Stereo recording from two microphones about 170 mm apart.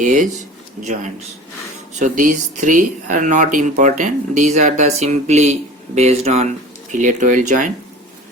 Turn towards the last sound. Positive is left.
turn(degrees=-45)  # may be behind; listen again after turning